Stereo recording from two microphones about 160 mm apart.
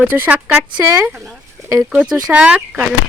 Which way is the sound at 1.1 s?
Centre (ahead or behind).